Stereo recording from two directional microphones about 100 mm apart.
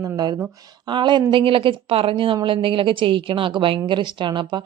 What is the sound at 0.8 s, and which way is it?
A woman's voice, 50° right (ahead or behind).